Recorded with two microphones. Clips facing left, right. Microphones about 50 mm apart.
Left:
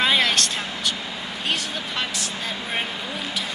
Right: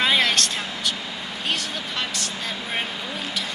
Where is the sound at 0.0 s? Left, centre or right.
Centre.